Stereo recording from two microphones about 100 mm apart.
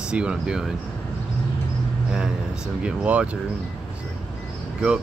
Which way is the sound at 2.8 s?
10° right (ahead or behind).